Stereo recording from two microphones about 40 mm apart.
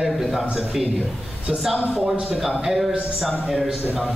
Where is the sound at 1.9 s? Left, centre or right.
Centre.